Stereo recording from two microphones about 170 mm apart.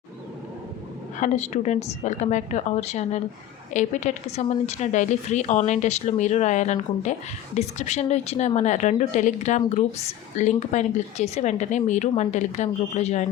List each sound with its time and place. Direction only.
1.2 s a woman's voice: 45° left (ahead or behind)